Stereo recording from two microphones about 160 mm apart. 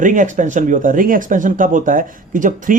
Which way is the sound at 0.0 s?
50° right (ahead or behind).